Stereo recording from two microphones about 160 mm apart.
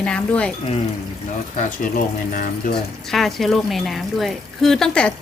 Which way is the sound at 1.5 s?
55° left (ahead or behind).